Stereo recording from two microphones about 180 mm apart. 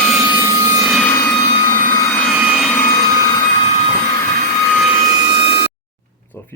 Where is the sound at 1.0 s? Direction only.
10° left (ahead or behind).